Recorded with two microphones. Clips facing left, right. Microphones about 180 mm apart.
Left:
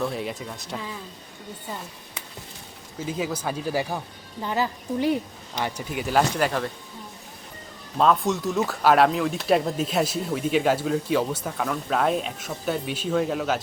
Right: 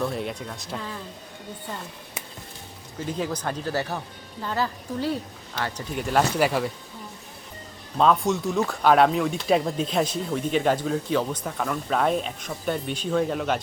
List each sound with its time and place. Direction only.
0.0 s speech: centre (ahead or behind)
3.0 s a woman's voice: 5° left (ahead or behind)
6.0 s speech: centre (ahead or behind)
7.9 s speech: centre (ahead or behind)